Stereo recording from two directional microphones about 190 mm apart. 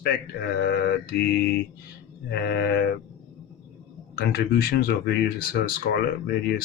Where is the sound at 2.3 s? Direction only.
55° left (ahead or behind).